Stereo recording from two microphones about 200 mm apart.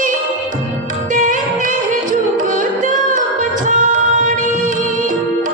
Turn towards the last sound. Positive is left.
turn(degrees=-40)  # may be behind; listen again after turning